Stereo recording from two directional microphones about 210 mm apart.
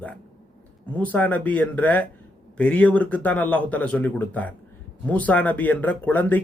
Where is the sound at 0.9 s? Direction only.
5° left (ahead or behind).